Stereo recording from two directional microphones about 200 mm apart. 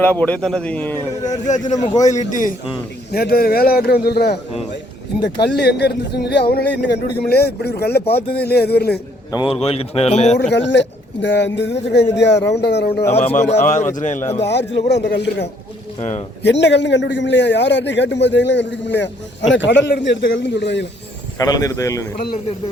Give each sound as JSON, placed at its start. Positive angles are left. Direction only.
{"t": 0.0, "sound": "speech", "side_deg": 10}
{"t": 1.5, "sound": "speech", "side_deg": 35}
{"t": 3.1, "sound": "a man's voice", "side_deg": 50}
{"t": 9.3, "sound": "speech", "side_deg": 25}
{"t": 10.5, "sound": "a man's voice", "side_deg": 60}
{"t": 13.1, "sound": "speech", "side_deg": 35}
{"t": 14.2, "sound": "speech", "side_deg": 10}
{"t": 14.4, "sound": "a man's voice", "side_deg": 60}
{"t": 16.0, "sound": "speech", "side_deg": 35}
{"t": 16.4, "sound": "a man's voice", "side_deg": 60}
{"t": 21.3, "sound": "speech", "side_deg": 15}